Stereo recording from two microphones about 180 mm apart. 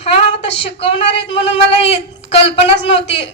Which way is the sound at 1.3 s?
35° left (ahead or behind).